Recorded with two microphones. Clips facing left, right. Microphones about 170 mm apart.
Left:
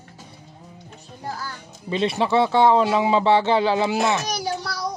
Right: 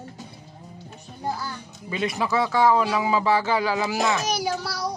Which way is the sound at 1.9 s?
25° left (ahead or behind).